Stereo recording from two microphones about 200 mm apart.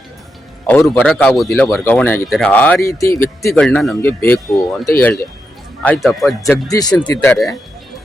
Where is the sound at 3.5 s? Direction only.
5° left (ahead or behind).